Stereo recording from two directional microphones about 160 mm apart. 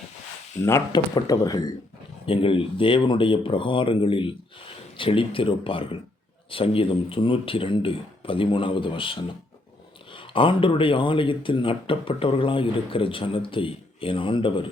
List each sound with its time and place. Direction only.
0.6 s speech: 20° left (ahead or behind)
2.2 s speech: 35° left (ahead or behind)